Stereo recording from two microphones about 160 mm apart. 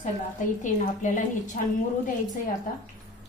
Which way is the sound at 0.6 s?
50° left (ahead or behind).